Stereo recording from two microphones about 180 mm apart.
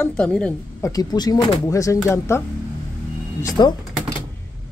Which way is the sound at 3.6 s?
25° left (ahead or behind).